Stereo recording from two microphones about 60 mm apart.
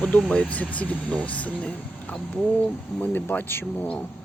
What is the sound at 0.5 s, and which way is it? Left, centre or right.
Speech, left.